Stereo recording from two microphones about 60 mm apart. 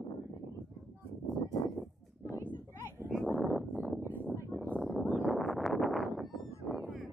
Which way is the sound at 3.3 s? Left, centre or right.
Right.